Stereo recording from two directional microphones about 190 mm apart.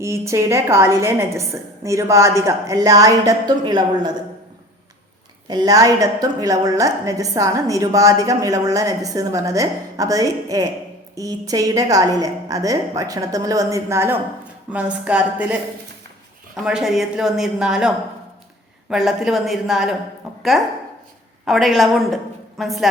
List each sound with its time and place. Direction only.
0.0 s a woman's voice: 15° right (ahead or behind)
5.5 s a woman's voice: 20° right (ahead or behind)
16.6 s speech: 5° right (ahead or behind)
20.3 s a sound: centre (ahead or behind)
21.4 s a woman's voice: centre (ahead or behind)